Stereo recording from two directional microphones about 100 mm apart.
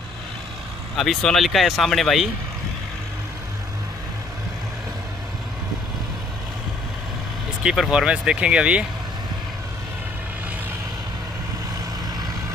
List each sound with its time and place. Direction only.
0.9 s speech: centre (ahead or behind)
7.6 s speech: 5° right (ahead or behind)